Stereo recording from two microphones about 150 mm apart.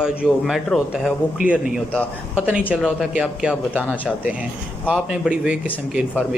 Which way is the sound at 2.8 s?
5° right (ahead or behind).